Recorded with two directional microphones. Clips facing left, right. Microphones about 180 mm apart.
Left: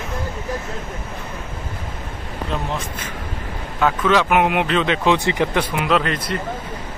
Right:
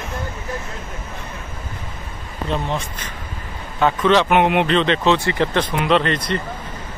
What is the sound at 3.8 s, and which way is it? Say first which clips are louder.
Speech: right 2 dB; 5° left (ahead or behind).